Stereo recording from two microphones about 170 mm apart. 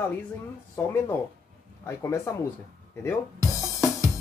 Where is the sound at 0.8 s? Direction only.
15° left (ahead or behind).